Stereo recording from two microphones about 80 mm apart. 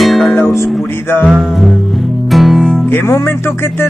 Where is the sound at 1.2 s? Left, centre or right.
Centre.